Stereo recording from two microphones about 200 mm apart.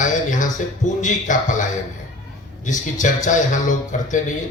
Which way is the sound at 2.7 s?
40° left (ahead or behind).